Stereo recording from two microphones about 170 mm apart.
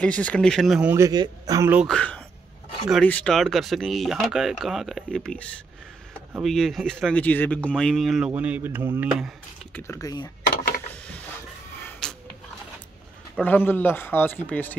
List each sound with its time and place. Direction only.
0.0 s speech: 10° left (ahead or behind)
0.9 s a man's voice: 20° right (ahead or behind)
1.8 s speech: 5° left (ahead or behind)
6.4 s speech: centre (ahead or behind)
9.8 s speech: 20° left (ahead or behind)
12.0 s a sound: 5° left (ahead or behind)
13.4 s a man's voice: 10° left (ahead or behind)